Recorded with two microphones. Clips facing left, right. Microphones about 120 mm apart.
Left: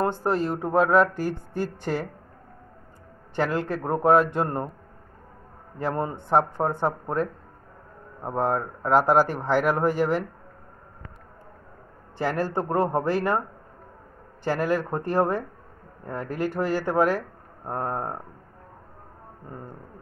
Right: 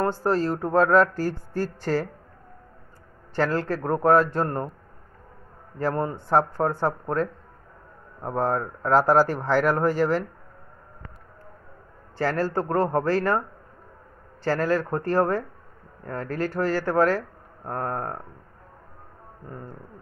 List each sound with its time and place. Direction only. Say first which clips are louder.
0.0 s speech: right 1 dB; 20° left (ahead or behind)
3.3 s speech: right 1 dB; 15° left (ahead or behind)
5.8 s speech: right 2 dB; 20° left (ahead or behind)
12.2 s speech: right 1 dB; 15° left (ahead or behind)
14.4 s speech: right 1 dB; 15° left (ahead or behind)